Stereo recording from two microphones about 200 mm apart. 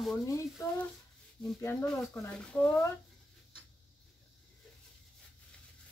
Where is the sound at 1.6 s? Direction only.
10° left (ahead or behind).